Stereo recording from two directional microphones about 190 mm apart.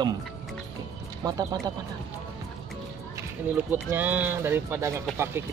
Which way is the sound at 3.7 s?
10° right (ahead or behind).